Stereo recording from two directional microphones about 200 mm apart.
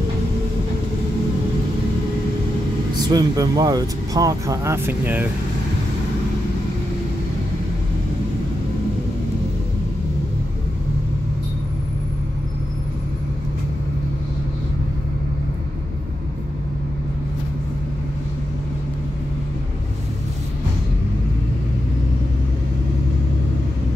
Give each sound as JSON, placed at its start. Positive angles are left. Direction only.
{"t": 3.1, "sound": "speech", "side_deg": -20}